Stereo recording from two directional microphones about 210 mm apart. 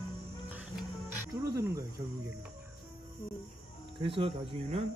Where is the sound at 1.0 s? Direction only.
10° right (ahead or behind).